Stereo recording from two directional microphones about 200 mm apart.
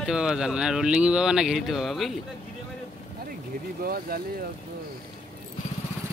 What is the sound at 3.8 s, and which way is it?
Speech, 50° right (ahead or behind).